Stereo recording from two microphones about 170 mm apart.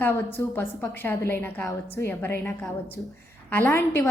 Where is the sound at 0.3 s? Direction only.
15° left (ahead or behind).